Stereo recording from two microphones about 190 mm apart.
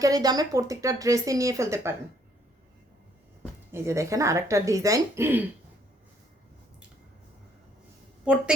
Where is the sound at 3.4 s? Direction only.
15° right (ahead or behind).